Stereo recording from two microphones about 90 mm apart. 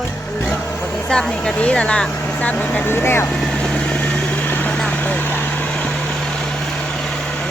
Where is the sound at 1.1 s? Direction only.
10° left (ahead or behind); by 3.3 s 25° left (ahead or behind).